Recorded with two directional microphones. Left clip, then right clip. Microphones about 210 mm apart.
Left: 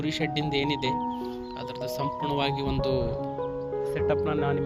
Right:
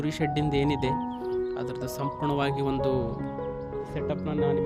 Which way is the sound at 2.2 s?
25° right (ahead or behind).